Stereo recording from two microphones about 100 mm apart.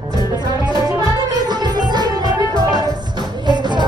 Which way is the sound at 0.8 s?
45° right (ahead or behind).